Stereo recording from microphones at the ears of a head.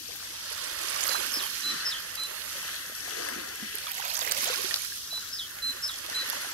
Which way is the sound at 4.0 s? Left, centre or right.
Right.